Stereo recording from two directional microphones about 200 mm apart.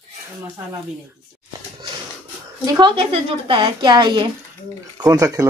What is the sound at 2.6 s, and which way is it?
A woman's voice, 20° right (ahead or behind).